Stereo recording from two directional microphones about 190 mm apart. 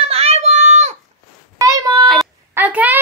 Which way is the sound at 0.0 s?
30° right (ahead or behind).